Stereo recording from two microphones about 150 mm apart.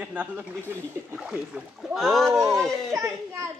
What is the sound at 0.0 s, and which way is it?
Speech, 10° right (ahead or behind).